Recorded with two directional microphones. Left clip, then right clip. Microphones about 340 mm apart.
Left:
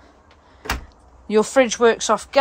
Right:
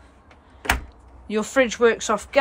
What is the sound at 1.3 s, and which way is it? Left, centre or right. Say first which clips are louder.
Speech: left 4 dB; centre.